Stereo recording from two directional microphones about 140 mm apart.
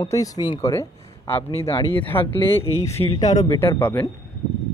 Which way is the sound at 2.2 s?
40° left (ahead or behind).